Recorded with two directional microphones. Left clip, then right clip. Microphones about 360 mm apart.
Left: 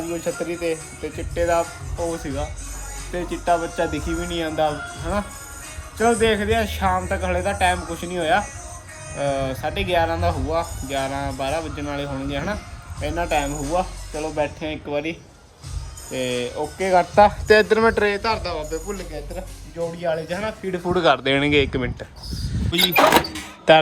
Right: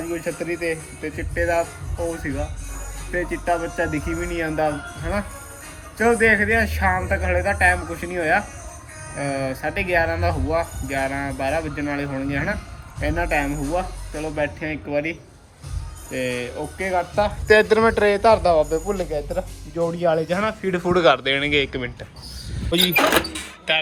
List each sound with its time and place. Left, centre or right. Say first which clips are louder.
0.1 s speech: even; centre
16.1 s speech: left 1 dB; centre
20.9 s speech: right 1 dB; centre